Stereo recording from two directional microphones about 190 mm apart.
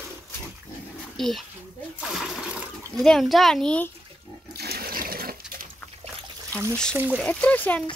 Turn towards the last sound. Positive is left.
turn(degrees=5)  # may be behind; listen again after turning